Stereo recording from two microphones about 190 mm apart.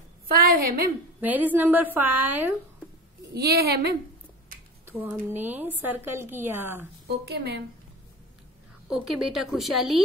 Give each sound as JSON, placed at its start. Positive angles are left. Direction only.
{"t": 0.4, "sound": "a woman's voice", "side_deg": -50}
{"t": 1.2, "sound": "speech", "side_deg": -10}
{"t": 3.3, "sound": "a woman's voice", "side_deg": -55}
{"t": 4.8, "sound": "speech", "side_deg": -10}
{"t": 7.1, "sound": "a woman's voice", "side_deg": -60}
{"t": 8.8, "sound": "a woman's voice", "side_deg": -5}